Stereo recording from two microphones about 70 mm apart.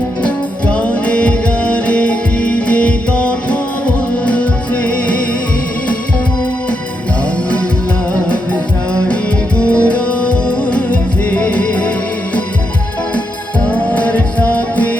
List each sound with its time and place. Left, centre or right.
0.2 s music: centre
8.1 s music: centre
13.7 s music: left